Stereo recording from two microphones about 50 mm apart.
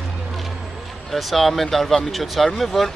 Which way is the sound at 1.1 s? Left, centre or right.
Centre.